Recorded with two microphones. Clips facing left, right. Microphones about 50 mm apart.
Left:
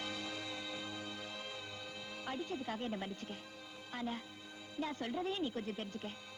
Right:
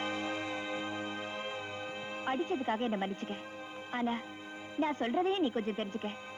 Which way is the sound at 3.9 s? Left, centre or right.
Right.